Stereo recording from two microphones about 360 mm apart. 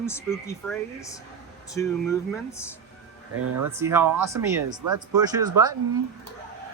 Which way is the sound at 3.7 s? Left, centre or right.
Centre.